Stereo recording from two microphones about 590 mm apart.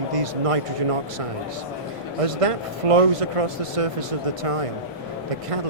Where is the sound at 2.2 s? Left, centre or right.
Right.